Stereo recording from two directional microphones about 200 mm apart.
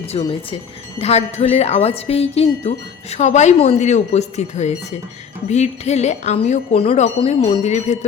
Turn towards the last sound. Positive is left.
turn(degrees=35)  # may be behind; listen again after turning